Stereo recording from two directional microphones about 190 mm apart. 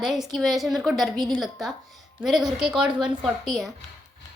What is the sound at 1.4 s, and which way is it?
A woman's voice, centre (ahead or behind).